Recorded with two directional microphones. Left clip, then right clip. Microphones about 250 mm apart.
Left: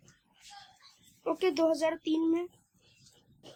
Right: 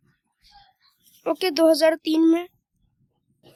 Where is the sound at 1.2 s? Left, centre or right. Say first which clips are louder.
Right 9 dB; right.